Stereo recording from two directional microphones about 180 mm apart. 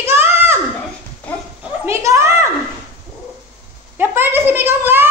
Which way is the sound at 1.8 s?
15° right (ahead or behind).